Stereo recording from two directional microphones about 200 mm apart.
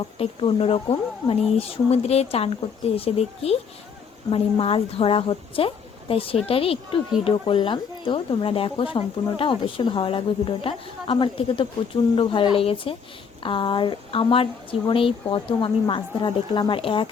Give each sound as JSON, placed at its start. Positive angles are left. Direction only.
{"t": 0.2, "sound": "speech", "side_deg": 30}